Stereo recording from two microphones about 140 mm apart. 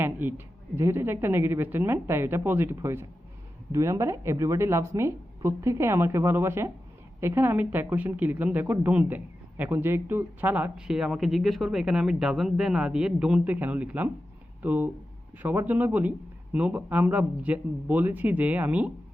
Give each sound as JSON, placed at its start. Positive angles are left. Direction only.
{"t": 0.0, "sound": "a woman's voice", "side_deg": -15}